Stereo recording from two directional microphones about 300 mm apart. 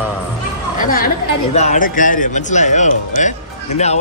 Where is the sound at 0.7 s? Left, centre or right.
Left.